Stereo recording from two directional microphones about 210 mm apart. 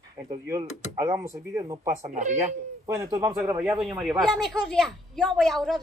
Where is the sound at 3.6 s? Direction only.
Centre (ahead or behind).